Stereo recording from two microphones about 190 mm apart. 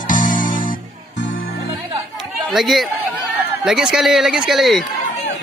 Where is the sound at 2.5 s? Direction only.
Centre (ahead or behind).